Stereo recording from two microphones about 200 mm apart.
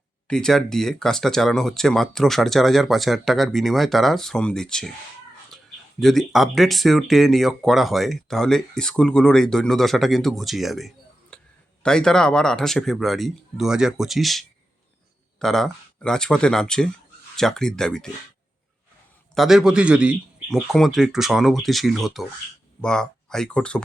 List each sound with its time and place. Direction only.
0.3 s speech: 5° left (ahead or behind)
6.0 s speech: centre (ahead or behind)
19.3 s speech: centre (ahead or behind)